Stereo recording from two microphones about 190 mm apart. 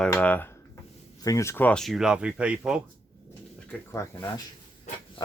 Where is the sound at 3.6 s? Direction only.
10° left (ahead or behind).